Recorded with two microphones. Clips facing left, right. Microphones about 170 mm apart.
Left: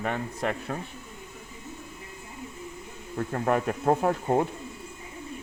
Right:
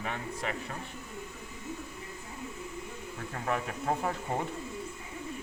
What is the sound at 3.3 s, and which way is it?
Speech, 60° left (ahead or behind).